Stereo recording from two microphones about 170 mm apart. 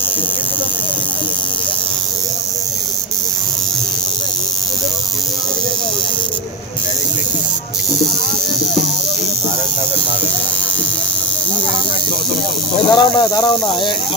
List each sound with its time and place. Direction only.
12.7 s speech: 25° left (ahead or behind)